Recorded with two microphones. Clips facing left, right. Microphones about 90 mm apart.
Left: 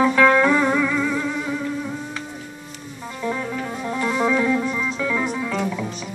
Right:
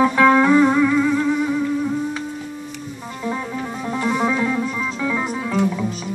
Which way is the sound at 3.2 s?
20° right (ahead or behind).